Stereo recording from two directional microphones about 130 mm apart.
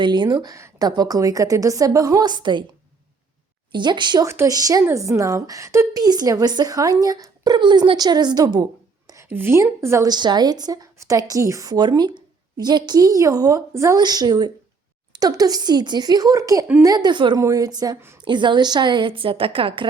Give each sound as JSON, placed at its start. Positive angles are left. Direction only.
{"t": 0.0, "sound": "a woman's voice", "side_deg": -35}
{"t": 3.7, "sound": "a woman's voice", "side_deg": -35}
{"t": 4.3, "sound": "a woman's voice", "side_deg": -25}
{"t": 9.0, "sound": "a woman's voice", "side_deg": -20}
{"t": 10.1, "sound": "a woman's voice", "side_deg": -35}